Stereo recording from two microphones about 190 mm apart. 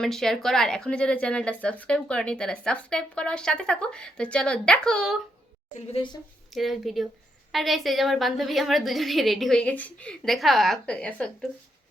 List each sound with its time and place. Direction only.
0.0 s speech: centre (ahead or behind)
5.7 s a woman's voice: 30° left (ahead or behind)
6.5 s speech: centre (ahead or behind)